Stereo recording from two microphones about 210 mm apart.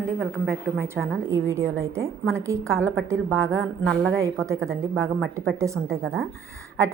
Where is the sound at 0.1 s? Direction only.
10° right (ahead or behind).